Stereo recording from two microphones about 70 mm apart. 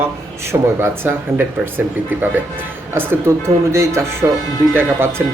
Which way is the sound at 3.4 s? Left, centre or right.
Right.